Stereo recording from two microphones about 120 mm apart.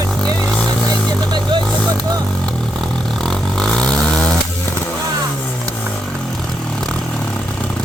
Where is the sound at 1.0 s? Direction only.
10° left (ahead or behind).